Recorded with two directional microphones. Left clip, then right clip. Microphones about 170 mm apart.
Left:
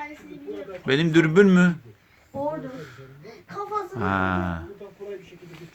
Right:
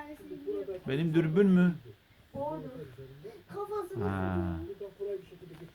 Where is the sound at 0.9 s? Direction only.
20° left (ahead or behind).